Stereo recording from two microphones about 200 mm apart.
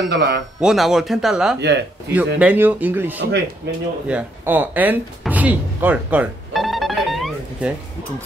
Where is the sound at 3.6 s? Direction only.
60° right (ahead or behind).